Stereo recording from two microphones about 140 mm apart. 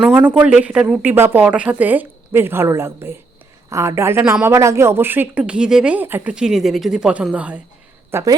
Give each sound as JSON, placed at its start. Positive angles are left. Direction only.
{"t": 0.2, "sound": "speech", "side_deg": -15}
{"t": 8.1, "sound": "a woman's voice", "side_deg": -25}